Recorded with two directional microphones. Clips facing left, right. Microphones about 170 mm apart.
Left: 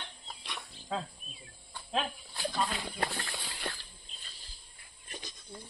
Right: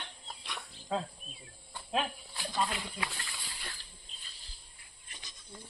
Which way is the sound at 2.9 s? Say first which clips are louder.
Left 5 dB; 55° left (ahead or behind).